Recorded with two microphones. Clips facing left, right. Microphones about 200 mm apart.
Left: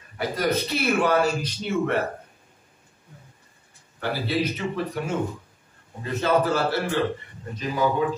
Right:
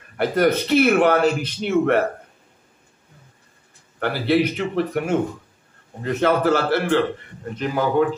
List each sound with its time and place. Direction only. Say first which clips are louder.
0.2 s a man's voice: right 6 dB; 60° right (ahead or behind)
4.0 s a man's voice: right 6 dB; 65° right (ahead or behind)